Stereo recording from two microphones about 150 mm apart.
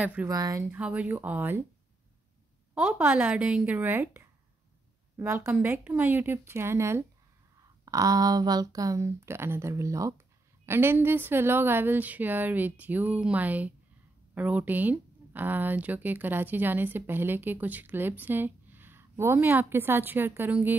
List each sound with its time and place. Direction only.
0.0 s speech: 10° right (ahead or behind)
0.3 s speech: 25° right (ahead or behind)
0.7 s speech: 10° right (ahead or behind)
2.7 s speech: 10° right (ahead or behind)